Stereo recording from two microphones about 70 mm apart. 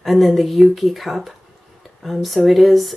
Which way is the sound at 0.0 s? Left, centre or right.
Centre.